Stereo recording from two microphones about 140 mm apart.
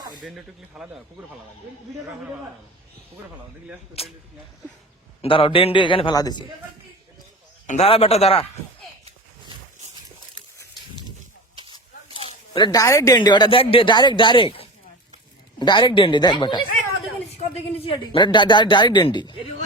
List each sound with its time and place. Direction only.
0.3 s speech: 5° right (ahead or behind)
4.0 s a man's voice: 45° left (ahead or behind)
5.2 s a man's voice: 40° left (ahead or behind)
7.7 s a man's voice: 45° left (ahead or behind)
11.5 s a sound: 35° right (ahead or behind)
12.1 s a sound: 35° left (ahead or behind)
12.8 s speech: 25° left (ahead or behind)
17.3 s speech: 45° left (ahead or behind)